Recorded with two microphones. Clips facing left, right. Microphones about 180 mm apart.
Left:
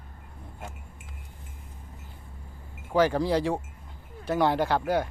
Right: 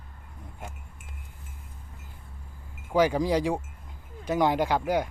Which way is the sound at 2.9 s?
15° right (ahead or behind).